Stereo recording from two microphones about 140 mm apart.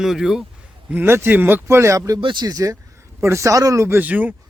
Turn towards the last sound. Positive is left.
turn(degrees=-10)  # may be behind; listen again after turning